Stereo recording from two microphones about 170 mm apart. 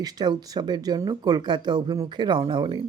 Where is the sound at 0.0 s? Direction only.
25° right (ahead or behind).